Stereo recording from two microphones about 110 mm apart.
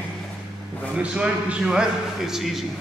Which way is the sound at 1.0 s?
10° right (ahead or behind).